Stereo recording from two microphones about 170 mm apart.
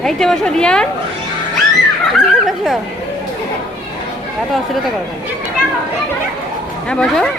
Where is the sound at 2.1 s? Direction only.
Centre (ahead or behind).